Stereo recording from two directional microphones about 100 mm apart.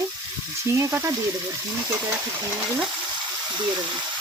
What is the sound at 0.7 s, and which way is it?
Frying, 25° right (ahead or behind).